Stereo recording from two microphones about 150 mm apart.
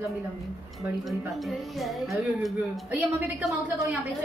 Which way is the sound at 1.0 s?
Centre (ahead or behind).